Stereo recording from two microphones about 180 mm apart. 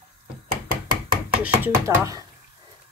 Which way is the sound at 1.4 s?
10° right (ahead or behind).